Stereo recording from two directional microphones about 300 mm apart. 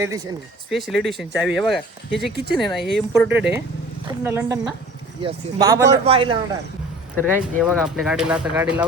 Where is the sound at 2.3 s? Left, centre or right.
Right.